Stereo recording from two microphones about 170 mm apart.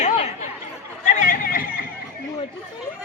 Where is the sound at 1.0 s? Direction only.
45° left (ahead or behind).